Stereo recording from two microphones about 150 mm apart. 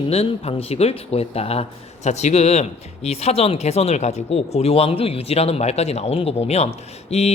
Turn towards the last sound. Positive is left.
turn(degrees=45)  # may be behind; listen again after turning